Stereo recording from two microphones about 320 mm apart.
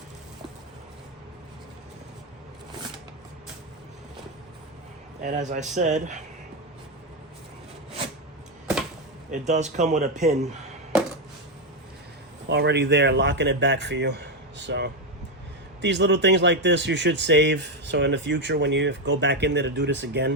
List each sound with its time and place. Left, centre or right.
5.2 s speech: right
9.5 s speech: right
12.5 s speech: right